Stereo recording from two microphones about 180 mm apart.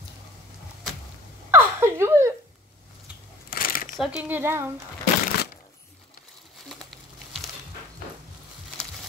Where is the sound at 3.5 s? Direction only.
50° left (ahead or behind).